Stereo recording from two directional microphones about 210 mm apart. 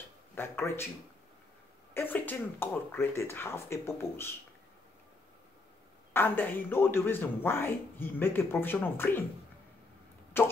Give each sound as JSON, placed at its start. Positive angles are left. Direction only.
{"t": 0.4, "sound": "speech", "side_deg": 10}
{"t": 2.0, "sound": "speech", "side_deg": 10}
{"t": 6.1, "sound": "speech", "side_deg": 10}